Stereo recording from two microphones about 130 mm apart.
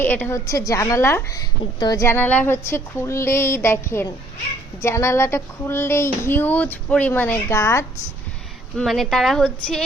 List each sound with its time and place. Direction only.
0.0 s speech: 15° left (ahead or behind)
2.0 s speech: 15° left (ahead or behind)
8.7 s a woman's voice: centre (ahead or behind)